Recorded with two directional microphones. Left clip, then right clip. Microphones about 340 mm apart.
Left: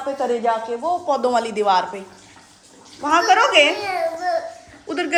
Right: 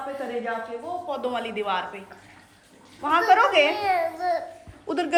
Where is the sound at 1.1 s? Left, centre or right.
Centre.